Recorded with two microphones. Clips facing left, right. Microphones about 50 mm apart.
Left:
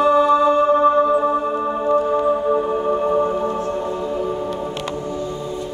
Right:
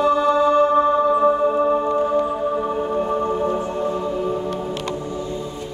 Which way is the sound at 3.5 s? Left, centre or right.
Centre.